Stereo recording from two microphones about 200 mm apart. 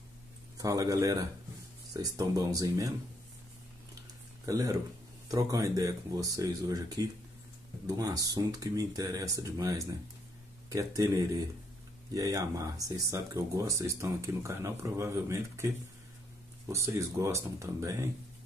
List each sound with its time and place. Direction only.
0.6 s speech: 15° right (ahead or behind)
4.5 s speech: 15° right (ahead or behind)